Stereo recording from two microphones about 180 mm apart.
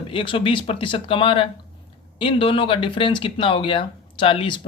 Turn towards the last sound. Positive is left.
turn(degrees=30)  # may be behind; listen again after turning